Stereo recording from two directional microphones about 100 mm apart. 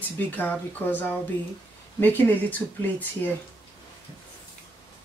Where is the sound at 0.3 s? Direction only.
15° left (ahead or behind).